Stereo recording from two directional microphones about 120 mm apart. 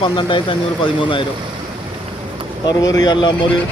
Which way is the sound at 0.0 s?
45° left (ahead or behind).